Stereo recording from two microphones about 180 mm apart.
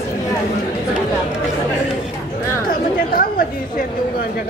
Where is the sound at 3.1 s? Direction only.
55° left (ahead or behind).